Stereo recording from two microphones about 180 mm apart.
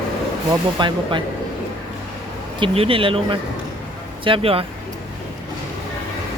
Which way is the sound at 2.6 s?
30° right (ahead or behind).